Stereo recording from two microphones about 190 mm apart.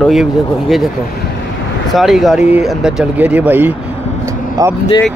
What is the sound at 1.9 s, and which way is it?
Speech, centre (ahead or behind).